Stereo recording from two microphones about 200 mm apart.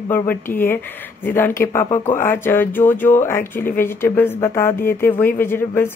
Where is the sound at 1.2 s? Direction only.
10° left (ahead or behind).